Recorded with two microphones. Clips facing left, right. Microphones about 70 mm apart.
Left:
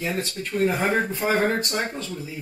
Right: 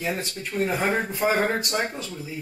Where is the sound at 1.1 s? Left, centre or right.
Centre.